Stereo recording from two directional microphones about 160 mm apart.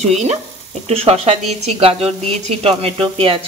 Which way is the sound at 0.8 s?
40° right (ahead or behind).